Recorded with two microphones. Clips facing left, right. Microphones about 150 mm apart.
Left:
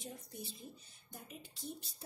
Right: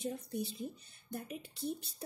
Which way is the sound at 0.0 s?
70° right (ahead or behind).